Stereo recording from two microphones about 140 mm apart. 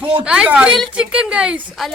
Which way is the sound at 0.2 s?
10° right (ahead or behind).